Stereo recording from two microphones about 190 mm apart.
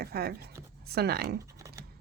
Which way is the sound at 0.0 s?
55° right (ahead or behind).